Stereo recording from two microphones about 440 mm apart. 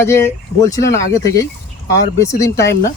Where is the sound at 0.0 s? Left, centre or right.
Centre.